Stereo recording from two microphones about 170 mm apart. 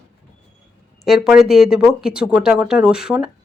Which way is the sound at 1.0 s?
Centre (ahead or behind).